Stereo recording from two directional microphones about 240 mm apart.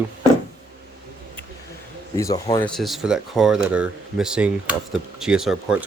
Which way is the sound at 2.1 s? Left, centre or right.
Centre.